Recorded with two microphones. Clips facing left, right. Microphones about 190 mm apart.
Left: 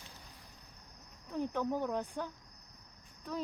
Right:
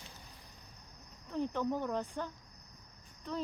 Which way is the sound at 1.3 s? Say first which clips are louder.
Even; 10° left (ahead or behind).